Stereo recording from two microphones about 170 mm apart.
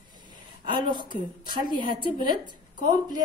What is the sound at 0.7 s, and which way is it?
A woman's voice, 25° right (ahead or behind).